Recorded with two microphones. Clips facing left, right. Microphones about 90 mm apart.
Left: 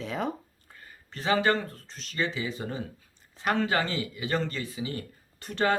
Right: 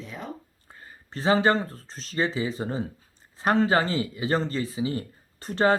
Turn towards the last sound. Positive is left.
turn(degrees=-35)  # may be behind; listen again after turning